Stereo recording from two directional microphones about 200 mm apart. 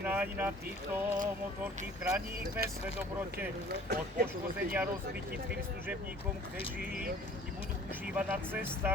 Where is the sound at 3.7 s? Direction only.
55° right (ahead or behind).